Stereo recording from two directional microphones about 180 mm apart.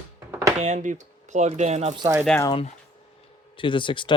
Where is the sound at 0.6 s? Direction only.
40° right (ahead or behind).